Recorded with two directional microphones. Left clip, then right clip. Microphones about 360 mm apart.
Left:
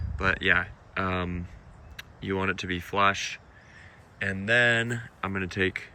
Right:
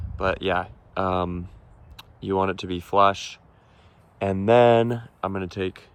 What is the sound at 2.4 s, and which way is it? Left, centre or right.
Speech, centre.